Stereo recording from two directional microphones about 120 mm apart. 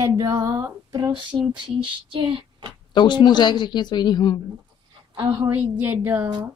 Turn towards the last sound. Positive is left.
turn(degrees=-15)  # may be behind; listen again after turning